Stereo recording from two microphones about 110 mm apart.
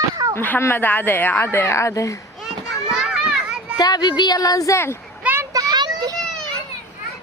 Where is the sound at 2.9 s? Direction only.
5° right (ahead or behind).